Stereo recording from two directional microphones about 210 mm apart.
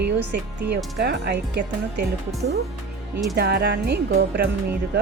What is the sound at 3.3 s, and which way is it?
Speech, 50° right (ahead or behind).